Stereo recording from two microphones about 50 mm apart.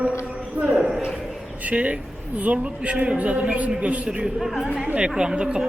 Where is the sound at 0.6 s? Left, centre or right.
Right.